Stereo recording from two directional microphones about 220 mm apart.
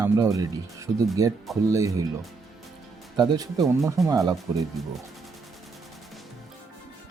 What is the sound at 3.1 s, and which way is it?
Speech, 20° right (ahead or behind).